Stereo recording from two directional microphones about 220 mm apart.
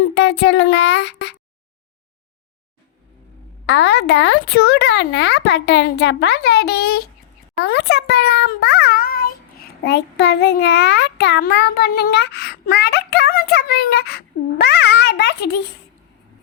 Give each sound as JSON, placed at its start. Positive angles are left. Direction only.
{"t": 0.0, "sound": "speech", "side_deg": 50}
{"t": 3.7, "sound": "a child's voice", "side_deg": 50}